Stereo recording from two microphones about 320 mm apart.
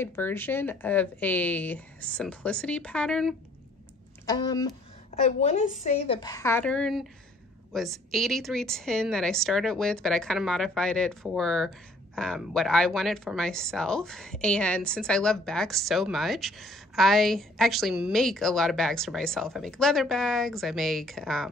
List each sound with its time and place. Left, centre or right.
0.0 s speech: centre
4.3 s a woman's voice: centre